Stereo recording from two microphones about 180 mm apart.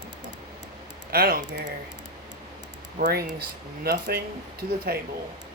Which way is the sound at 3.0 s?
60° right (ahead or behind).